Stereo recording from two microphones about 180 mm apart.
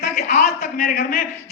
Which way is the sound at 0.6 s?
60° left (ahead or behind).